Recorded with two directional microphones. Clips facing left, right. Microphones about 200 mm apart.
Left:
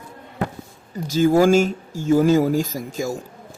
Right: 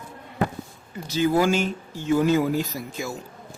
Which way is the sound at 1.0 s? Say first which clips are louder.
Left 5 dB; 45° left (ahead or behind).